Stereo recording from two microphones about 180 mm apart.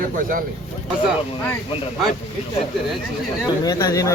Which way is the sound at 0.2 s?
50° right (ahead or behind).